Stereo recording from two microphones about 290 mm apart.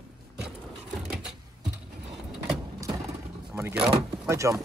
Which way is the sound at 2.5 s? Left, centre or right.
Centre.